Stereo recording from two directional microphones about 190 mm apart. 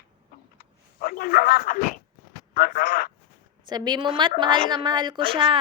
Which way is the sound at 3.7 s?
20° right (ahead or behind).